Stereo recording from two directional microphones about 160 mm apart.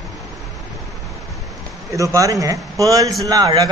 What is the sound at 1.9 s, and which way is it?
A man's voice, 20° right (ahead or behind).